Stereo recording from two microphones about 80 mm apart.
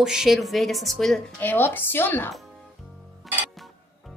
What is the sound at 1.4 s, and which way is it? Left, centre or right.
Speech, left.